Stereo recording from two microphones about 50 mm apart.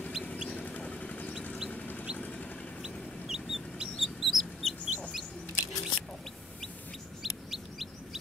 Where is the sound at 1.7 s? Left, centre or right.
Left.